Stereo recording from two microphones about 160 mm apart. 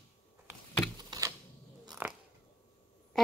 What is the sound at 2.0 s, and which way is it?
Biting, 10° right (ahead or behind).